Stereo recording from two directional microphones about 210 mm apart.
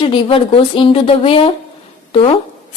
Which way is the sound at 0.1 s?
25° left (ahead or behind).